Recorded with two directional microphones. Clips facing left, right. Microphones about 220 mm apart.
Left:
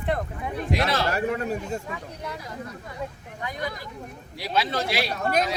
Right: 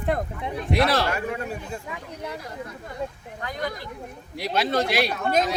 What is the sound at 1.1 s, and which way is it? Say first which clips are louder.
Speech: left 3 dB; 40° left (ahead or behind).